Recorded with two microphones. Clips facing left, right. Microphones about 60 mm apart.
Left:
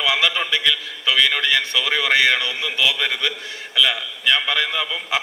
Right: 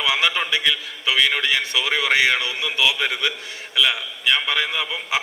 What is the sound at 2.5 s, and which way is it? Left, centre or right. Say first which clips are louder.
Speech: even; right.